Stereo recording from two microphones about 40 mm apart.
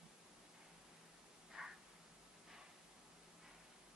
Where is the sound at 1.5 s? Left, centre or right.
Centre.